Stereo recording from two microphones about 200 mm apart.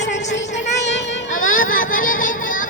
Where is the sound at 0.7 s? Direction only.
60° left (ahead or behind).